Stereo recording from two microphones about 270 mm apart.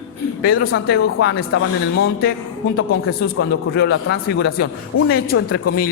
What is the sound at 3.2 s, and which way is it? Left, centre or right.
A man's voice, left.